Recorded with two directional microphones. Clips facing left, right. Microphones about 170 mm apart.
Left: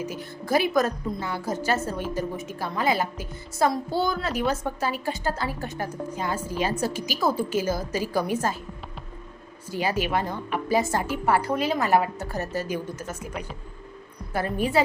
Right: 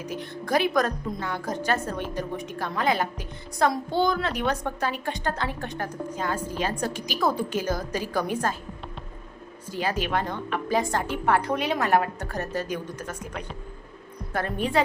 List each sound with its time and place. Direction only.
0.0 s a woman's voice: 5° left (ahead or behind)
9.6 s a woman's voice: 10° left (ahead or behind)